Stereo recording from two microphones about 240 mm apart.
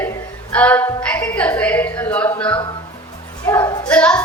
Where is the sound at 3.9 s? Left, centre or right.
Centre.